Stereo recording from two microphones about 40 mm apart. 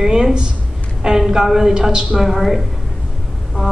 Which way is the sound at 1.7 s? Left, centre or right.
Right.